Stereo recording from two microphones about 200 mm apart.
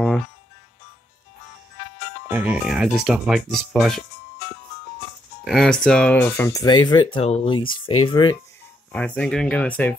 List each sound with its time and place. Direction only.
2.3 s speech: 5° right (ahead or behind)
5.4 s speech: centre (ahead or behind); by 6.8 s 15° left (ahead or behind)
7.2 s speech: 30° left (ahead or behind)
8.9 s speech: 5° left (ahead or behind)